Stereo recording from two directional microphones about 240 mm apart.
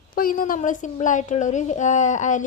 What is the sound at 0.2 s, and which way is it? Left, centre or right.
A woman's voice, left.